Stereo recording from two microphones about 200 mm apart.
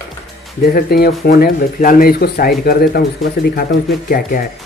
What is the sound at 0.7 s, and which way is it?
Speech, 50° left (ahead or behind).